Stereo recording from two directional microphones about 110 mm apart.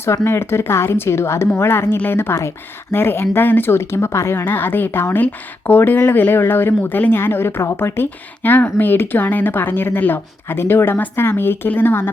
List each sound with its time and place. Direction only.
0.3 s speech: 20° left (ahead or behind)